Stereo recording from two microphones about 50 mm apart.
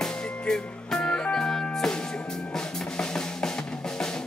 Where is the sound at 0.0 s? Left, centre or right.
Centre.